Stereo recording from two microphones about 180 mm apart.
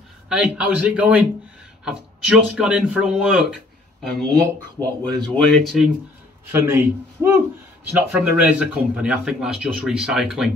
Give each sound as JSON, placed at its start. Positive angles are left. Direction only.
{"t": 0.3, "sound": "a man's voice", "side_deg": -5}
{"t": 6.5, "sound": "a man's voice", "side_deg": -15}